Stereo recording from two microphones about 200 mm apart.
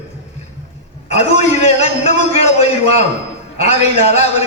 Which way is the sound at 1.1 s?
35° left (ahead or behind).